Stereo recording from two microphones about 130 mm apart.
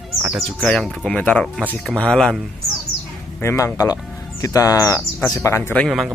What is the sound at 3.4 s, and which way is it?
Speech, 25° left (ahead or behind).